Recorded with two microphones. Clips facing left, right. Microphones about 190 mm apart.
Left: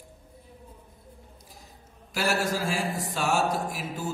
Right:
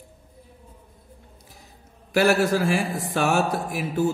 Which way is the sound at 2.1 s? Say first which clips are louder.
Right 8 dB; 60° right (ahead or behind).